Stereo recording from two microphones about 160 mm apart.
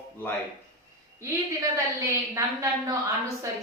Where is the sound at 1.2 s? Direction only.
20° right (ahead or behind).